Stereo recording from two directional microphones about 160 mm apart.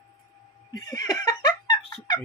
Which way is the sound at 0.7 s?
25° left (ahead or behind).